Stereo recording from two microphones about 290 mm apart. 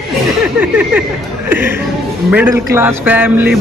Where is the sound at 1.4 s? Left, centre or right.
Centre.